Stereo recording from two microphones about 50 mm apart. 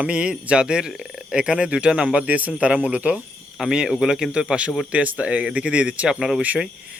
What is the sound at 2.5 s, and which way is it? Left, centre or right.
Speech, centre.